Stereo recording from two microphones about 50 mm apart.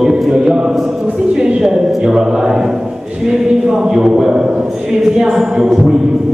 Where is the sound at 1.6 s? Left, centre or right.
Centre.